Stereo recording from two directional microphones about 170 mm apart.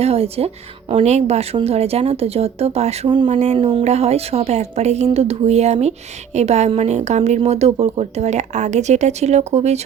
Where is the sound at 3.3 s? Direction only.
40° right (ahead or behind).